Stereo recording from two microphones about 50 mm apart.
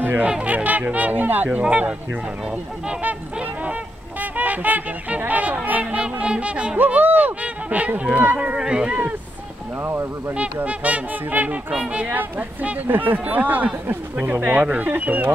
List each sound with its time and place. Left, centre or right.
0.0 s speech: right
0.3 s speech: right
1.6 s speech: right
4.2 s speech: right
6.9 s speech: right
7.4 s honk: right
8.0 s speech: right
8.5 s speech: centre
9.8 s speech: right
10.3 s speech: right
12.2 s speech: right